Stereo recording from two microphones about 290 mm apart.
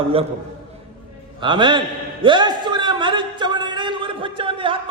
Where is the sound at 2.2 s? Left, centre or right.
Centre.